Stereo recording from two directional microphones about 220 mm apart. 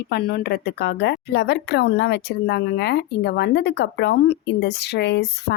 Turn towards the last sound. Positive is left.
turn(degrees=50)  # may be behind; listen again after turning